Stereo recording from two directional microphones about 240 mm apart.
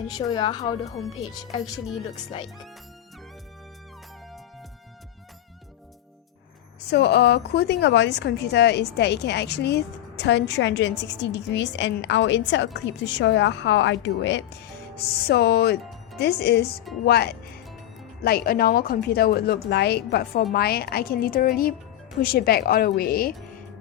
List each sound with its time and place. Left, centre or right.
0.2 s speech: centre
6.9 s a woman's voice: left